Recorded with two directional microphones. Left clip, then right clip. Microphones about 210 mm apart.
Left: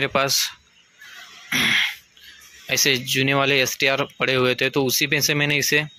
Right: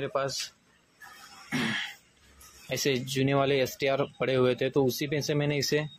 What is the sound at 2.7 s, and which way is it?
Speech, centre (ahead or behind).